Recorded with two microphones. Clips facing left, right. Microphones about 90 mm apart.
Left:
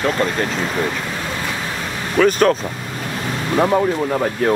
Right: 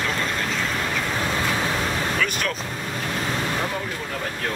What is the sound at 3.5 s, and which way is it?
Speech, 50° left (ahead or behind).